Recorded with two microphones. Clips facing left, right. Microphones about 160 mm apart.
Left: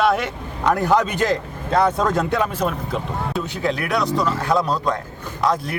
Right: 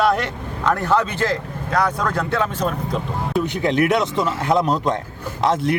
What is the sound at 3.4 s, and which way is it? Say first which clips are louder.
Speech: right 5 dB; 20° right (ahead or behind).